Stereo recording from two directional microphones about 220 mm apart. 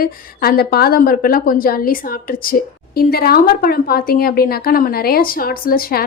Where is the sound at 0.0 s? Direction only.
40° left (ahead or behind).